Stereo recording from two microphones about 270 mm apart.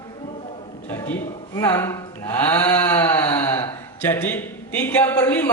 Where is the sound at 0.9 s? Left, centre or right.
Centre.